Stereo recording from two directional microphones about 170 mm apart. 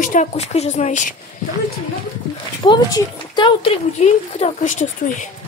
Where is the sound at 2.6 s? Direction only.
25° left (ahead or behind).